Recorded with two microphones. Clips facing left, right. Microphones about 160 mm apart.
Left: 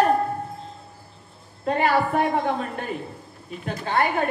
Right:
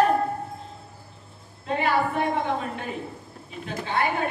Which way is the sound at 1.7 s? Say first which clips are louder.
Left 3 dB; 50° left (ahead or behind).